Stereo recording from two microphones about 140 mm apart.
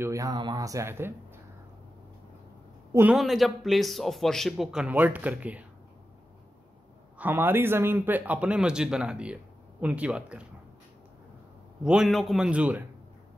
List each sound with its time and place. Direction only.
0.0 s speech: 25° right (ahead or behind)
2.9 s a man's voice: 15° right (ahead or behind)
3.2 s a man's voice: centre (ahead or behind)
7.2 s speech: 15° right (ahead or behind)
11.8 s a man's voice: 5° right (ahead or behind)